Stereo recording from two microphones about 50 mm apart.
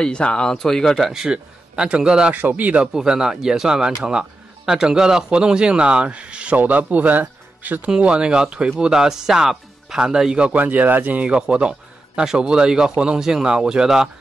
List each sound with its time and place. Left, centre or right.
0.0 s speech: centre
1.3 s a man's voice: centre
2.3 s speech: right
2.9 s speech: centre
6.5 s speech: right
7.9 s speech: centre
10.6 s speech: right
11.2 s a man's voice: centre